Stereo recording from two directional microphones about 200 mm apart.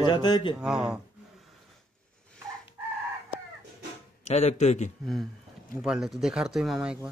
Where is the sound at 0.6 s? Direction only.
5° right (ahead or behind).